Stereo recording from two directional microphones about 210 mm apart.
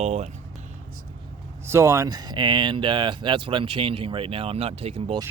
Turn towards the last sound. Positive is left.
turn(degrees=-30)  # may be behind; listen again after turning